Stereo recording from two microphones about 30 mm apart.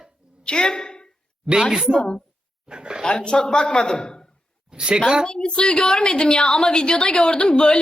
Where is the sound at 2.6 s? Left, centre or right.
Right.